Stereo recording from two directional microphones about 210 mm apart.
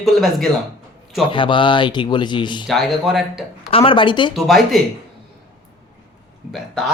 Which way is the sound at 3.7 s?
25° left (ahead or behind).